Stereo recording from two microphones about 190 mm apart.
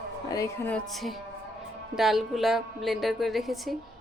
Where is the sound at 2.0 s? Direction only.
Centre (ahead or behind).